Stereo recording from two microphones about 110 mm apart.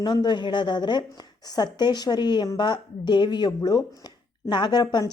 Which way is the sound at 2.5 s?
45° left (ahead or behind).